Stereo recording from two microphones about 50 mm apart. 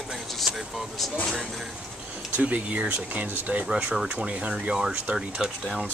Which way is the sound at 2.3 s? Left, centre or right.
Right.